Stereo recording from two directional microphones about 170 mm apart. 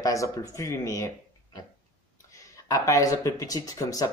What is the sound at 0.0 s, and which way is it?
Speech, 20° left (ahead or behind).